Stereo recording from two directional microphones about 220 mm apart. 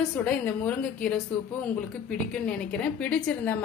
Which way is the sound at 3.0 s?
5° left (ahead or behind).